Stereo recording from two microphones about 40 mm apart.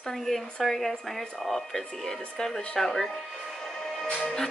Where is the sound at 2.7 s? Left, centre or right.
Centre.